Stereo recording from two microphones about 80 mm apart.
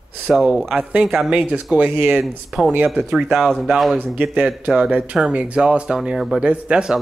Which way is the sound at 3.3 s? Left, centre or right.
Centre.